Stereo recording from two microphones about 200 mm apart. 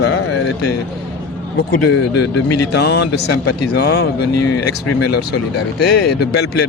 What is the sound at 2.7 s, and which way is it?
Speech, 55° left (ahead or behind).